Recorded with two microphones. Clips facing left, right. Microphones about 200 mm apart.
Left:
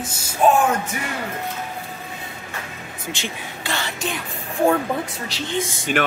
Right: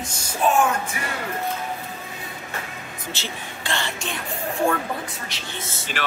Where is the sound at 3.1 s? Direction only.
15° left (ahead or behind).